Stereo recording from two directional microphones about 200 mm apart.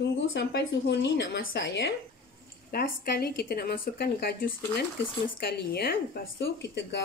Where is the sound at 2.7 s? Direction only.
50° left (ahead or behind).